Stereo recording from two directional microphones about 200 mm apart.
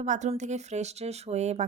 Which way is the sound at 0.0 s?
35° right (ahead or behind).